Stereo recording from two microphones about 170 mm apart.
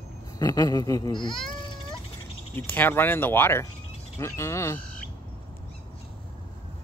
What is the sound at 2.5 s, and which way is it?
Speech, 10° left (ahead or behind).